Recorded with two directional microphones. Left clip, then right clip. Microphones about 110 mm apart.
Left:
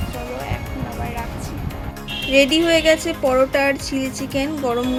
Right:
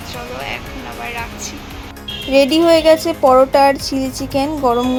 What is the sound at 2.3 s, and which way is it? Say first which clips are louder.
Speech: right 4 dB; 30° right (ahead or behind).